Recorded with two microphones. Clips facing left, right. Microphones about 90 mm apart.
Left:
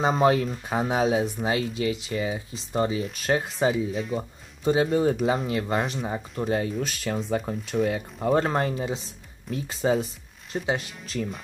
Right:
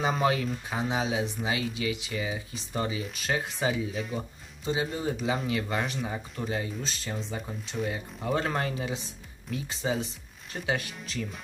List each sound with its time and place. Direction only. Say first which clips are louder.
0.0 s speech: left 5 dB; 35° left (ahead or behind)
0.7 s speech: left 7 dB; 50° left (ahead or behind)
3.9 s speech: left 5 dB; centre (ahead or behind)
4.6 s speech: left 8 dB; 55° left (ahead or behind); by 9.0 s 35° left (ahead or behind)
9.5 s speech: left 6 dB; 45° left (ahead or behind)